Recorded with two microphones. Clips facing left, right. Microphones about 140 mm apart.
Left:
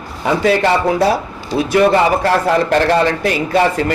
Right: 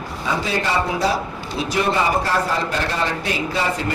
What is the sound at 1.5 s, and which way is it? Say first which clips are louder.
Speech: left 9 dB; 90° left.